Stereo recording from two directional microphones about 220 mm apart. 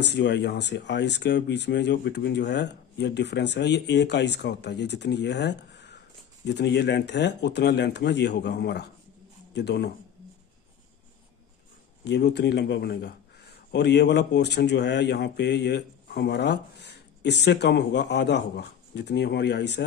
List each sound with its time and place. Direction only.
0.0 s speech: 50° left (ahead or behind)
12.0 s speech: 50° left (ahead or behind)